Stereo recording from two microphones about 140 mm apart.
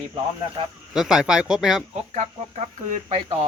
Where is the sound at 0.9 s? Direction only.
5° right (ahead or behind).